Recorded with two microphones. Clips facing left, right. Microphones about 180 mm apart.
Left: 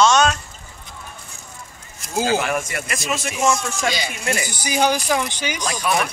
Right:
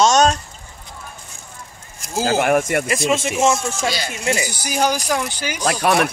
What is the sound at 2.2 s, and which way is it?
Speech, 50° right (ahead or behind).